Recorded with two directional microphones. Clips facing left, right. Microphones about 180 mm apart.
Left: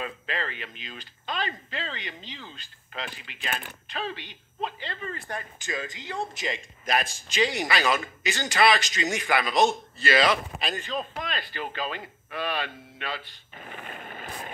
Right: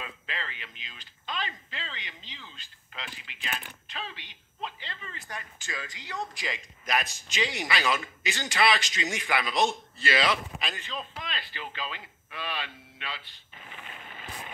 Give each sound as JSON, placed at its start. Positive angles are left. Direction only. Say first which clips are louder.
{"t": 0.0, "sound": "a man's voice", "louder": "left 7 dB", "side_deg": 50}
{"t": 5.6, "sound": "a man's voice", "louder": "left 6 dB", "side_deg": 20}